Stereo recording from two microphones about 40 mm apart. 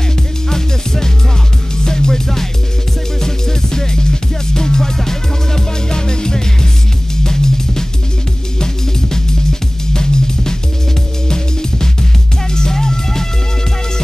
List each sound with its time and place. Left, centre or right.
0.5 s music: centre
9.1 s music: centre